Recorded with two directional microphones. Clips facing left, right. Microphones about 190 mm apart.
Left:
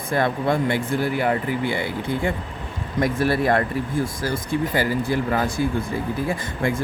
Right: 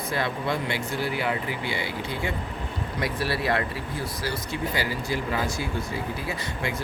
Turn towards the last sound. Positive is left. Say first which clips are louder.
# left 6 dB
turn(degrees=50)  # may be behind; listen again after turning